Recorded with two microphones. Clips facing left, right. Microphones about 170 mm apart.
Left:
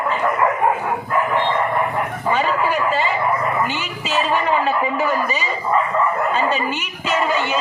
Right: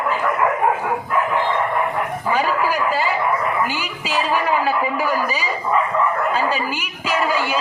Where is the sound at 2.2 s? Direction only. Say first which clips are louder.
Left 1 dB; 5° right (ahead or behind).